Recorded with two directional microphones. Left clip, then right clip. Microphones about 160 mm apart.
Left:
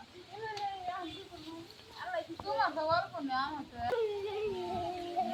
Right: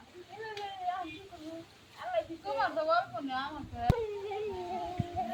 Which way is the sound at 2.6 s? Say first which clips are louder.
Right 2 dB; 45° right (ahead or behind).